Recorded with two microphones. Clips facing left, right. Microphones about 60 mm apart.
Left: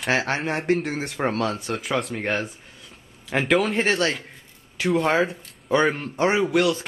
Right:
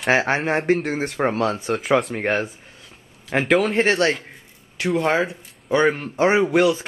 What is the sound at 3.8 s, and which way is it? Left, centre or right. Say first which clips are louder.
Speech: right 4 dB; centre.